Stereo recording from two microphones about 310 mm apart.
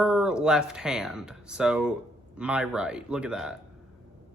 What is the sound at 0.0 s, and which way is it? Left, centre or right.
Speech, centre.